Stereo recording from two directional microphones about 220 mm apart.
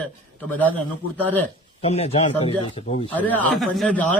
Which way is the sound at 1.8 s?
25° left (ahead or behind).